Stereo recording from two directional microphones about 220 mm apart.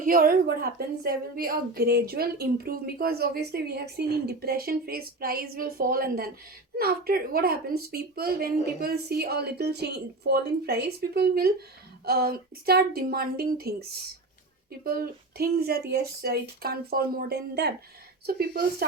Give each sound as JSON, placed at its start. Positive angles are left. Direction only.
{"t": 0.0, "sound": "a woman's voice", "side_deg": -40}
{"t": 14.8, "sound": "a woman's voice", "side_deg": -45}